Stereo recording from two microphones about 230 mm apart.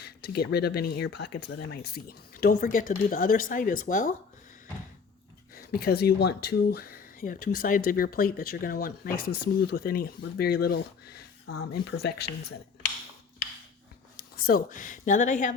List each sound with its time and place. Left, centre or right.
0.0 s speech: left
5.5 s speech: left
14.4 s speech: left